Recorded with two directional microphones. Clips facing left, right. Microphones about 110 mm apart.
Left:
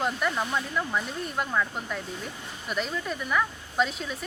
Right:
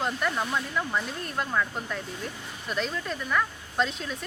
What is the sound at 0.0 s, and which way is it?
Speech, centre (ahead or behind).